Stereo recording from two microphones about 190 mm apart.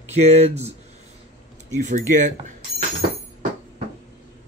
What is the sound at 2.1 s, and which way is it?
Speech, 40° right (ahead or behind).